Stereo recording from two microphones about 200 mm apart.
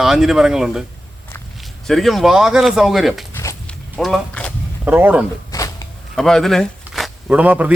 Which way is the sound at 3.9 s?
Centre (ahead or behind).